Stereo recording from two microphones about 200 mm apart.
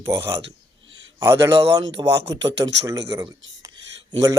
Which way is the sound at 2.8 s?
15° right (ahead or behind).